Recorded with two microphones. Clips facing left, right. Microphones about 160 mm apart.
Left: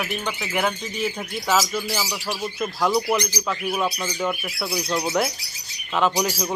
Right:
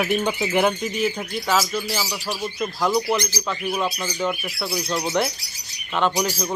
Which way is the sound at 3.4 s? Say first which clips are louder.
Even; centre (ahead or behind).